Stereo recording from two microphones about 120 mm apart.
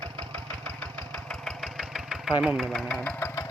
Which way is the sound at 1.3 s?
Centre (ahead or behind).